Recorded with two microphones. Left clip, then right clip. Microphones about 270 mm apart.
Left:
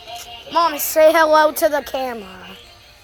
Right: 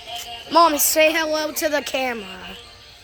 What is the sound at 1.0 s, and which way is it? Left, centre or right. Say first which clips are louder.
A woman's voice: left 13 dB; centre.